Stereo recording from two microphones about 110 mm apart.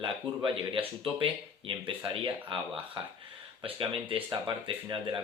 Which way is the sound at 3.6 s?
55° right (ahead or behind).